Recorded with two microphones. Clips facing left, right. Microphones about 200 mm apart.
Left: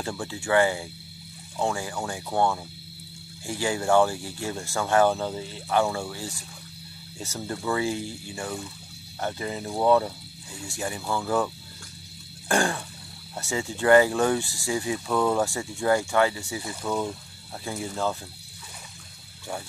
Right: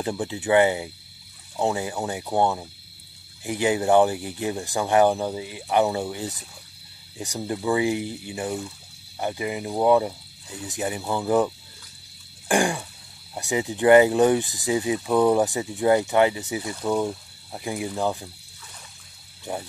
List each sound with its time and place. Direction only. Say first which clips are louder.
0.0 s speech: right 5 dB; 20° right (ahead or behind)
12.4 s a sound: right 3 dB; 15° right (ahead or behind)
13.3 s speech: right 4 dB; 15° right (ahead or behind)
19.5 s speech: right 3 dB; 20° right (ahead or behind)